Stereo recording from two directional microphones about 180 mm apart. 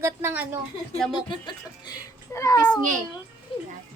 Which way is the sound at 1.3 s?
25° left (ahead or behind).